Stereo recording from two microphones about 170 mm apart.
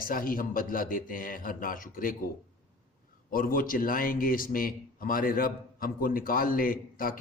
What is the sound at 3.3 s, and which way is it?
A man's voice, 55° left (ahead or behind).